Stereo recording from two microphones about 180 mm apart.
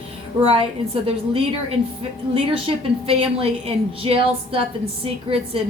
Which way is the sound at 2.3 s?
30° right (ahead or behind).